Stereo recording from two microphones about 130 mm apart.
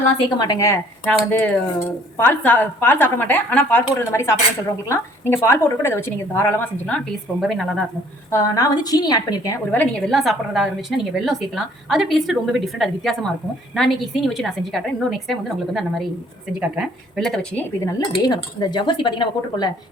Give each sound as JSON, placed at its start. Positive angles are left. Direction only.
{"t": 0.3, "sound": "speech", "side_deg": 30}
{"t": 1.0, "sound": "a woman's voice", "side_deg": 10}
{"t": 8.3, "sound": "a woman's voice", "side_deg": 25}
{"t": 9.7, "sound": "a woman's voice", "side_deg": 10}
{"t": 18.1, "sound": "speech", "side_deg": 35}